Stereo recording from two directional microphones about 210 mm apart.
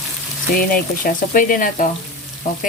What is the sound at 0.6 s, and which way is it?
Speech, 40° left (ahead or behind).